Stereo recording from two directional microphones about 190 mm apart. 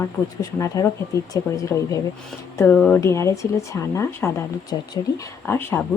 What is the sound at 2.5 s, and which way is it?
A woman's voice, 5° left (ahead or behind).